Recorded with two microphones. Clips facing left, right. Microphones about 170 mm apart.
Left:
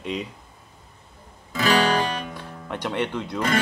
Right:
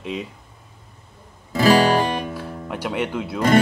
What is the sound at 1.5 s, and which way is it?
Guitar, 35° right (ahead or behind).